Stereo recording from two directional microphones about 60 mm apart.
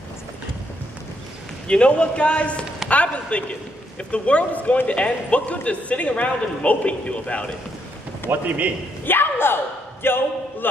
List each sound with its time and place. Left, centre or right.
1.7 s a man's voice: centre
8.3 s a man's voice: right
9.0 s a sound: left
10.0 s a man's voice: left